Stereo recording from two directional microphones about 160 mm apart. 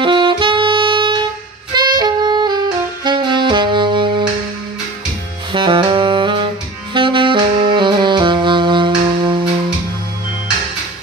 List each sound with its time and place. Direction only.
0.0 s saxophone: 30° right (ahead or behind)
5.5 s saxophone: 30° right (ahead or behind)